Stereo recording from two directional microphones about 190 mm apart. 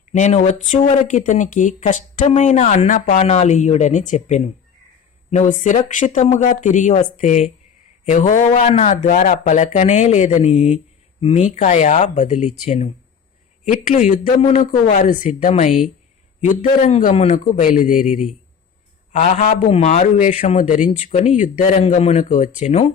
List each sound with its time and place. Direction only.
0.1 s speech: 40° left (ahead or behind)
19.1 s speech: 40° left (ahead or behind)